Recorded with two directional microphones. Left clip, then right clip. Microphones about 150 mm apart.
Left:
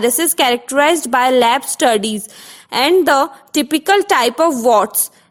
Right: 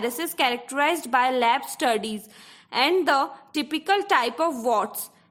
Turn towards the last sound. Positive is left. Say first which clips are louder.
# left 11 dB
turn(degrees=40)  # may be behind; listen again after turning